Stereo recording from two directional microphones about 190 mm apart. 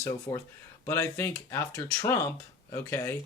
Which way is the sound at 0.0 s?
20° left (ahead or behind).